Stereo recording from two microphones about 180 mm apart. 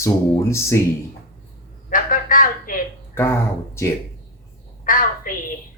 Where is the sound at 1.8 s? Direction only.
50° left (ahead or behind).